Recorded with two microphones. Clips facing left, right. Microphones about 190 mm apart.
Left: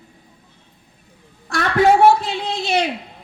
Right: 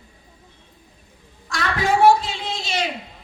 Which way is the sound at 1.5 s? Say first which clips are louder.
Left 7 dB; 60° left (ahead or behind).